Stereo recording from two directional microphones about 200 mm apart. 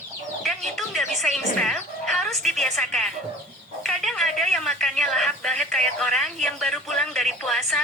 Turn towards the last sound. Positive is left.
turn(degrees=0)  # may be behind; listen again after turning